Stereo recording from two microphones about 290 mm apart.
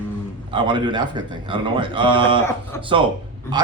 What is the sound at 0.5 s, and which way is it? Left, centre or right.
Speech, centre.